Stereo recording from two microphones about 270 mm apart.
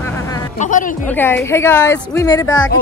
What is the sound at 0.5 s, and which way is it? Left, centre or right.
Speech, left.